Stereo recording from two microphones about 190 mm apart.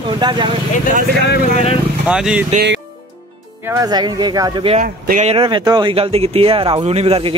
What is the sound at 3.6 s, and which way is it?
Speech, 15° right (ahead or behind).